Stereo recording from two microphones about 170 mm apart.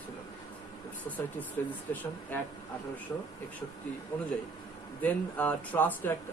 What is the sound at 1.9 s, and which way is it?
Speech, 10° left (ahead or behind).